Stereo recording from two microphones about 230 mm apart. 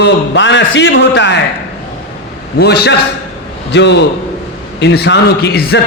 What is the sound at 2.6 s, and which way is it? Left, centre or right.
A man's voice, left.